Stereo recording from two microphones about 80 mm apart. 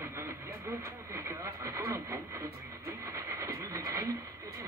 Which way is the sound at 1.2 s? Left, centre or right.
Right.